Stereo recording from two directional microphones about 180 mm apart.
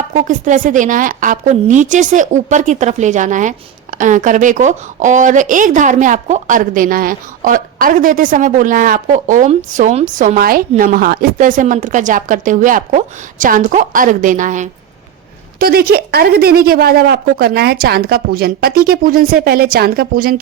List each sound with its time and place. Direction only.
0.1 s a woman's voice: 45° right (ahead or behind)
15.5 s a woman's voice: 55° right (ahead or behind)